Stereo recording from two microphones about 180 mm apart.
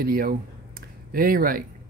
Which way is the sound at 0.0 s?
55° right (ahead or behind).